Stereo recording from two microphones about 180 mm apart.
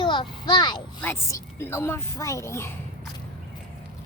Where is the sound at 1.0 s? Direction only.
15° left (ahead or behind).